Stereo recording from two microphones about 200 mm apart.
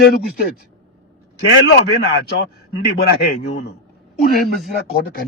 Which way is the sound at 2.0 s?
50° left (ahead or behind).